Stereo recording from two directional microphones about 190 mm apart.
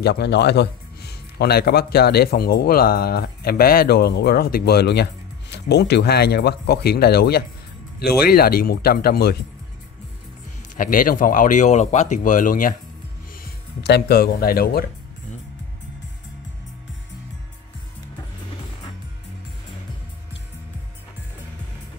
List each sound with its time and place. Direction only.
0.0 s speech: 60° left (ahead or behind)
10.8 s speech: 45° left (ahead or behind)
13.4 s speech: 60° left (ahead or behind)